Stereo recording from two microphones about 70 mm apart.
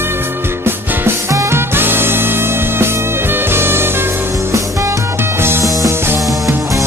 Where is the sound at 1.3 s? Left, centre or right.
Right.